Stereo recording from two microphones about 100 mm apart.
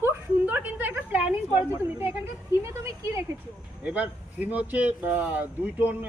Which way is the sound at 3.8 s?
15° right (ahead or behind).